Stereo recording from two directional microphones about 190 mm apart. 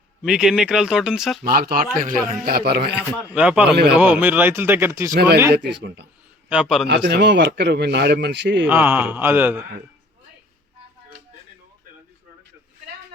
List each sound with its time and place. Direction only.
0.2 s speech: 5° right (ahead or behind)
1.5 s a man's voice: 50° right (ahead or behind)
3.3 s speech: 5° right (ahead or behind)
5.1 s a man's voice: 60° right (ahead or behind)
5.4 s speech: 10° right (ahead or behind)
5.7 s a man's voice: 60° right (ahead or behind)
6.5 s speech: 5° right (ahead or behind)
6.8 s a man's voice: 65° right (ahead or behind)
8.6 s speech: 10° right (ahead or behind)